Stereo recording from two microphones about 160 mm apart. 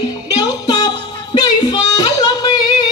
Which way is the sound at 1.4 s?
25° left (ahead or behind).